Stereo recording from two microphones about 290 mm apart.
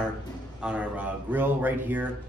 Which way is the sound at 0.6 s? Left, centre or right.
Centre.